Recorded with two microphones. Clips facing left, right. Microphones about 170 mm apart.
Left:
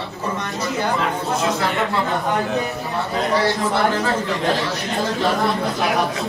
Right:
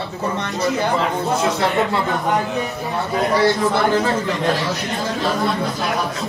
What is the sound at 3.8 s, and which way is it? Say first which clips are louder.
Speech: right 3 dB; 20° right (ahead or behind).